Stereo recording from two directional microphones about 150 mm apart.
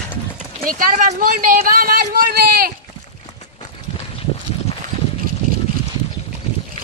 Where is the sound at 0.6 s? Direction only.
65° right (ahead or behind); by 2.7 s 85° right.